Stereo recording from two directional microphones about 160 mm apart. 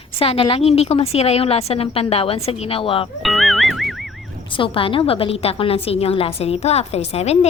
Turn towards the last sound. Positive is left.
turn(degrees=40)  # may be behind; listen again after turning